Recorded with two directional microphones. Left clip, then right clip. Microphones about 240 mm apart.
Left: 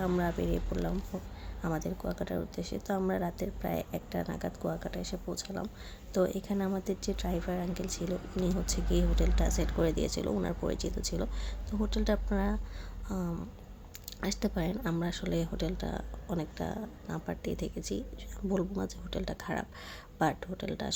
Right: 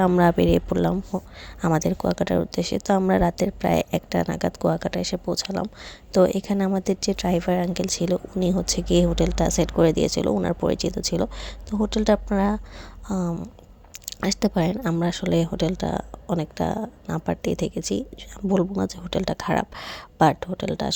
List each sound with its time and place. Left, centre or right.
0.0 s speech: right